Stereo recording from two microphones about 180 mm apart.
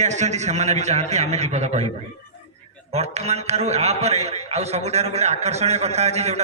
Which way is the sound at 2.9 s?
35° right (ahead or behind).